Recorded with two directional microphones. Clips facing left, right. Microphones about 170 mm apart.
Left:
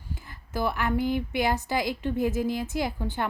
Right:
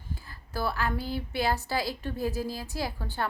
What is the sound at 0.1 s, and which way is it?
A woman's voice, 20° left (ahead or behind).